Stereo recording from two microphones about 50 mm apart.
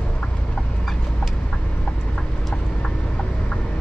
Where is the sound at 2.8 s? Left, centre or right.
Centre.